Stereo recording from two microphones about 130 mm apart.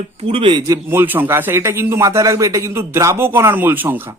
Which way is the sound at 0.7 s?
20° right (ahead or behind).